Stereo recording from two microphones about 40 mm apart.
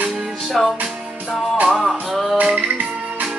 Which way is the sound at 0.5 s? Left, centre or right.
Centre.